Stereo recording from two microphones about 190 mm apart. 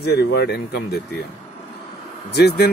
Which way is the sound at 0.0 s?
60° left (ahead or behind).